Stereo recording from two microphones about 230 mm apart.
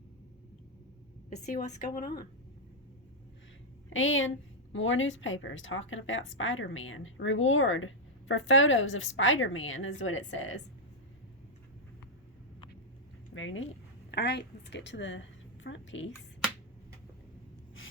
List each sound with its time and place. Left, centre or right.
1.5 s a woman's voice: left
3.8 s a woman's voice: left
13.3 s speech: left
14.1 s a woman's voice: left